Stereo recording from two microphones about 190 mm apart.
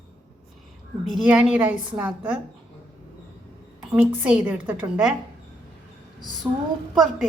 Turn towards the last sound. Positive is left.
turn(degrees=0)  # may be behind; listen again after turning